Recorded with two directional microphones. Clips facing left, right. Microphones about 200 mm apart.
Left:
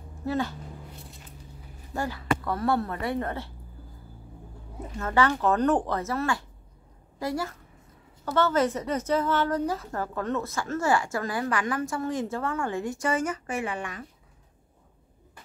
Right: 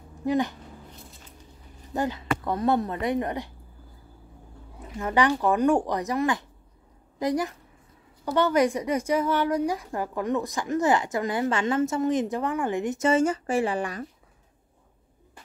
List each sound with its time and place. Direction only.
0.2 s a woman's voice: 15° right (ahead or behind)
2.0 s speech: 20° right (ahead or behind)
4.9 s a woman's voice: 15° right (ahead or behind); by 14.0 s 35° right (ahead or behind)